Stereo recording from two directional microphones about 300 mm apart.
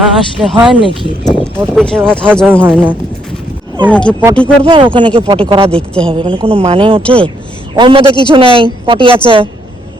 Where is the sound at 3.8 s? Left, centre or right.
Centre.